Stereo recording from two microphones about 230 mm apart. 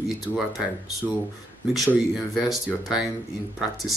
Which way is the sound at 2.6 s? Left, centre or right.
Centre.